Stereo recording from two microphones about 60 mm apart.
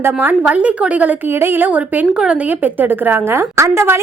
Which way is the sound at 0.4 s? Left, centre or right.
Right.